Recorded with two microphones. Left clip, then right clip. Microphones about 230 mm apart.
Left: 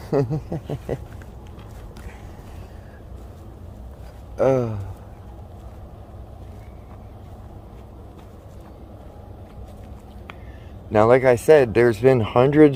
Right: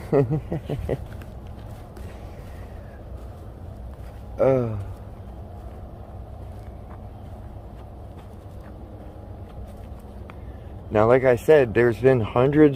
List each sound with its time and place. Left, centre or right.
0.1 s speech: centre
4.4 s speech: left
10.9 s speech: left